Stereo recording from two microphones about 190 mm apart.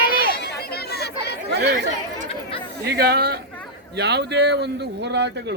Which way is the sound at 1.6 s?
50° right (ahead or behind).